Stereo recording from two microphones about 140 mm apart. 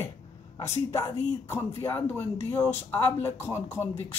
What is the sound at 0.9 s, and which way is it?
A woman's voice, 15° left (ahead or behind).